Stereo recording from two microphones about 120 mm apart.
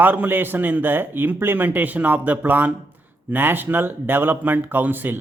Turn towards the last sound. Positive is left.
turn(degrees=-15)  # may be behind; listen again after turning